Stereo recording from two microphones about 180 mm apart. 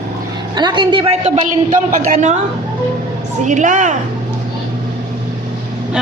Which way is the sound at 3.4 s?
45° right (ahead or behind).